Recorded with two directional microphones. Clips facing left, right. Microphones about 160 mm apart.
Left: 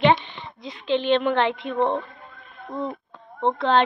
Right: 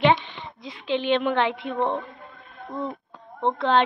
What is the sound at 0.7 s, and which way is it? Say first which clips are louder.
A woman's voice: left 2 dB; 10° right (ahead or behind).